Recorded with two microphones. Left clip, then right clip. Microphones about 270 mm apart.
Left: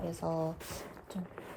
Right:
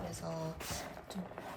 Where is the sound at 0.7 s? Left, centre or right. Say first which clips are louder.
Right 2 dB; centre.